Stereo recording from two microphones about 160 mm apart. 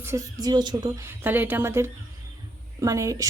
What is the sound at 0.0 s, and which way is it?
Speech, 20° right (ahead or behind).